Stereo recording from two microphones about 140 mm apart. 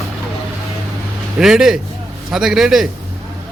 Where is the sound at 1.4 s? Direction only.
5° right (ahead or behind).